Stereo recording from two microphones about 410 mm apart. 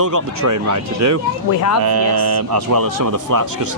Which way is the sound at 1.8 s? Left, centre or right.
Right.